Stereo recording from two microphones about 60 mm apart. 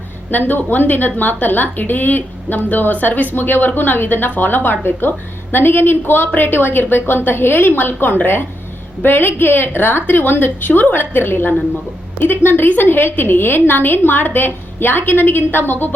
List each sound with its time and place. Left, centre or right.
0.3 s a woman's voice: left